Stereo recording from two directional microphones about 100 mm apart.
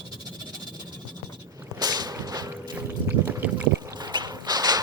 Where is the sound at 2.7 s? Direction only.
20° right (ahead or behind).